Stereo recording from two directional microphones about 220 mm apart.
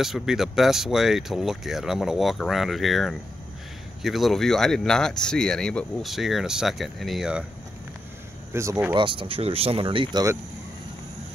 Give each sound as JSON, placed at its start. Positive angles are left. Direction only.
{"t": 0.0, "sound": "speech", "side_deg": 0}
{"t": 8.5, "sound": "speech", "side_deg": -10}
{"t": 8.9, "sound": "speech", "side_deg": -20}